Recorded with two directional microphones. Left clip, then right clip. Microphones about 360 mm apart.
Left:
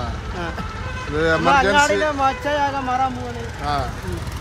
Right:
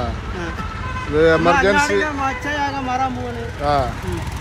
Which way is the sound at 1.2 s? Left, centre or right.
Centre.